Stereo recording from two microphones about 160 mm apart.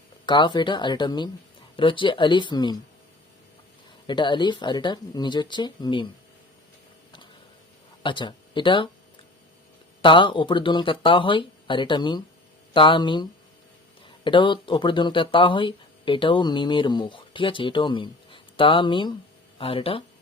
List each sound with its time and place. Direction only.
0.3 s speech: 30° left (ahead or behind)
4.0 s speech: 30° left (ahead or behind)
8.0 s speech: 30° left (ahead or behind)
10.0 s speech: 30° left (ahead or behind)
14.3 s speech: 30° left (ahead or behind)